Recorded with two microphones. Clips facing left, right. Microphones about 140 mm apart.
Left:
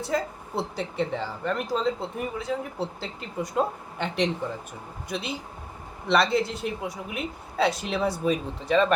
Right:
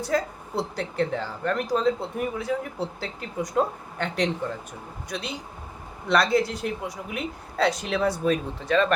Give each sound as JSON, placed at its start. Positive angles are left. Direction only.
{"t": 0.1, "sound": "speech", "side_deg": 0}